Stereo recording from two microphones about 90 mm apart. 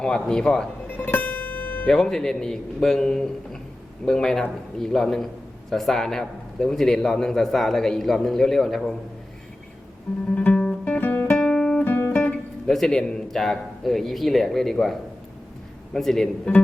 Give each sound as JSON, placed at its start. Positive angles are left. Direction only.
{"t": 0.0, "sound": "speech", "side_deg": 10}
{"t": 0.9, "sound": "music", "side_deg": 20}
{"t": 2.0, "sound": "a man's voice", "side_deg": 5}
{"t": 10.3, "sound": "guitar", "side_deg": 15}
{"t": 11.3, "sound": "guitar", "side_deg": 5}
{"t": 11.8, "sound": "guitar", "side_deg": 20}
{"t": 12.6, "sound": "a man's voice", "side_deg": 5}